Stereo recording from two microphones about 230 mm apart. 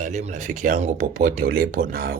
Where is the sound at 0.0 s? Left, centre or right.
Right.